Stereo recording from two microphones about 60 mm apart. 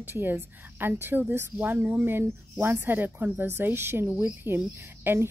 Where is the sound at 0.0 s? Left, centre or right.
Right.